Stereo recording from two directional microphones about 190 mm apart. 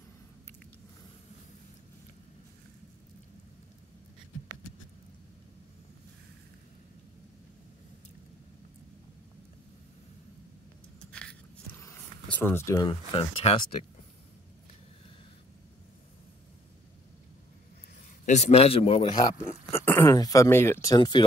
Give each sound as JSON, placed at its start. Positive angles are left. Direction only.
{"t": 11.1, "sound": "a sound", "side_deg": 5}
{"t": 11.8, "sound": "speech", "side_deg": 10}
{"t": 18.2, "sound": "a man's voice", "side_deg": 35}
{"t": 19.2, "sound": "speech", "side_deg": 15}